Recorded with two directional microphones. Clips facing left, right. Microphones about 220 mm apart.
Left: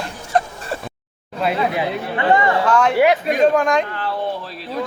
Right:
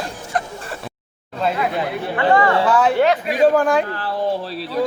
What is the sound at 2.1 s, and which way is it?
Speech, 20° left (ahead or behind).